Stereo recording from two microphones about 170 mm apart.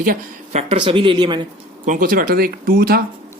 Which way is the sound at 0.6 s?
35° right (ahead or behind).